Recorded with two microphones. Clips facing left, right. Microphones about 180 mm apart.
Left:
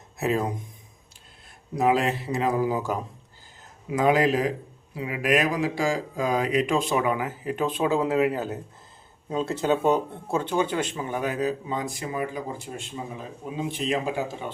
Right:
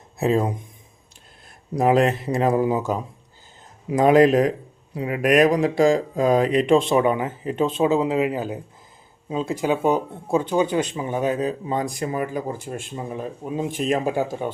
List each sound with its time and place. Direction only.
0.2 s speech: 30° right (ahead or behind)
1.8 s speech: 45° right (ahead or behind)
2.5 s speech: 25° right (ahead or behind)
3.8 s speech: 40° right (ahead or behind)
11.9 s speech: 45° right (ahead or behind)